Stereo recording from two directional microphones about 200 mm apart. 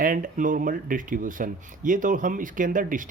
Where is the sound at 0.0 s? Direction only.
45° right (ahead or behind).